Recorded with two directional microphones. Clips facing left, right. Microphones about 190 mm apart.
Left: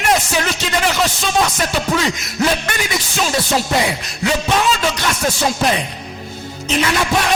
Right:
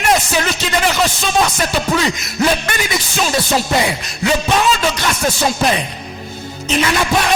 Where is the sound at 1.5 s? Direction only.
15° right (ahead or behind).